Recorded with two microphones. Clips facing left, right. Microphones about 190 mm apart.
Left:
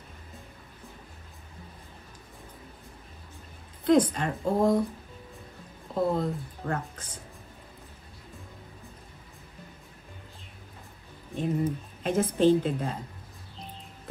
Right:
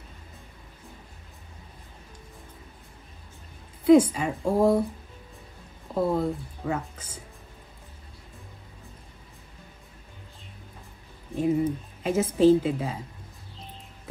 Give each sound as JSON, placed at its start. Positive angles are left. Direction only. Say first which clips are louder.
{"t": 3.8, "sound": "speech", "louder": "right 5 dB", "side_deg": -5}
{"t": 5.9, "sound": "speech", "louder": "right 2 dB", "side_deg": -5}
{"t": 11.3, "sound": "speech", "louder": "right 4 dB", "side_deg": -10}